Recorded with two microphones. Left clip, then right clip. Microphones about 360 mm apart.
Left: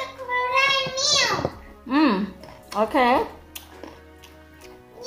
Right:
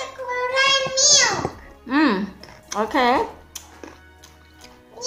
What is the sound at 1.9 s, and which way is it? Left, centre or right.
Speech, centre.